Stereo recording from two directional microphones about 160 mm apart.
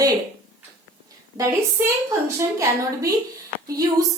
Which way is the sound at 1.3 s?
20° right (ahead or behind).